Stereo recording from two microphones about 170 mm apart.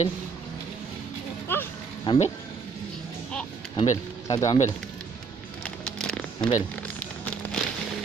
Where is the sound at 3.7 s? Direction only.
45° left (ahead or behind).